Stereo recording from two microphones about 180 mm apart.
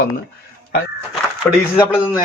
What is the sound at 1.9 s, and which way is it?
Speech, 5° right (ahead or behind).